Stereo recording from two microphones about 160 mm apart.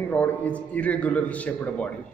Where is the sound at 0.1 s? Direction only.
10° left (ahead or behind).